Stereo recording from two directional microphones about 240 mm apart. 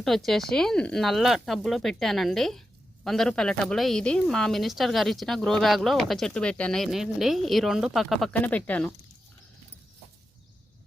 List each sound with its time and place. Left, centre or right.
0.3 s speech: centre